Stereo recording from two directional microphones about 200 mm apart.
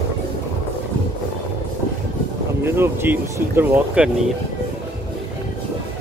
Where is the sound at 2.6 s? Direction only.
10° right (ahead or behind).